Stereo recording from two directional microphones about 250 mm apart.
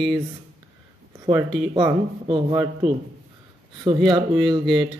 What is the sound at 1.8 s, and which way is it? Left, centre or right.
Speech, centre.